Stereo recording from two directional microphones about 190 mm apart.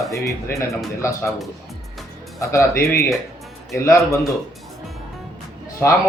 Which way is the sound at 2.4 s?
15° left (ahead or behind).